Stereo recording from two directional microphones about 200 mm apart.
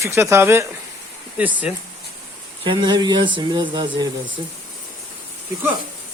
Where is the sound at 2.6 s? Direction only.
25° right (ahead or behind).